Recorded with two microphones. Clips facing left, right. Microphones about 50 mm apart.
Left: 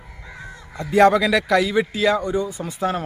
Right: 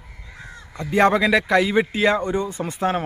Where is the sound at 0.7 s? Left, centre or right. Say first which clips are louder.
Left 2 dB; right.